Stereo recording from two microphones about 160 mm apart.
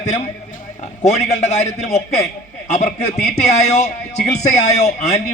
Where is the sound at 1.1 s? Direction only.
45° left (ahead or behind).